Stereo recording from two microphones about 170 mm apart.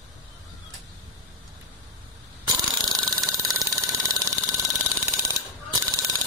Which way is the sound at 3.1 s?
20° right (ahead or behind).